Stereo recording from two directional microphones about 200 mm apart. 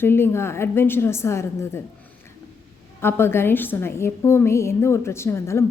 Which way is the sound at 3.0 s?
10° left (ahead or behind).